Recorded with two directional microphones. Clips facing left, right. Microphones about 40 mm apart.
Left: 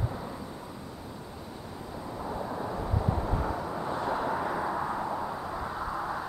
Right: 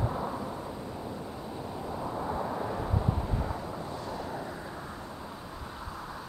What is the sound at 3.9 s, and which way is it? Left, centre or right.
Vehicle, left.